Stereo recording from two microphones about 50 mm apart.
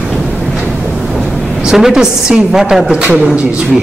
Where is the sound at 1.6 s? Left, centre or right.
Centre.